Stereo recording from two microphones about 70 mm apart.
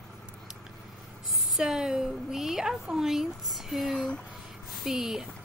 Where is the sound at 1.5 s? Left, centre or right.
Centre.